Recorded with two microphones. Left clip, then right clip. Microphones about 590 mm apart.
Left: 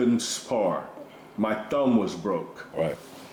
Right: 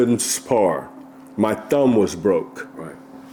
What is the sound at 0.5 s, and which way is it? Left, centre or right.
Speech, right.